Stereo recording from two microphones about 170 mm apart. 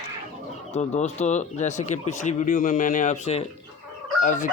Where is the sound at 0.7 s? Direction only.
40° left (ahead or behind).